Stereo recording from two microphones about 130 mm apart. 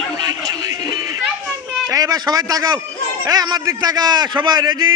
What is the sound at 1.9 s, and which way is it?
A man's voice, 30° right (ahead or behind).